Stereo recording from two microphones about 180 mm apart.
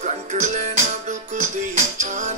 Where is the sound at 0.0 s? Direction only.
40° right (ahead or behind).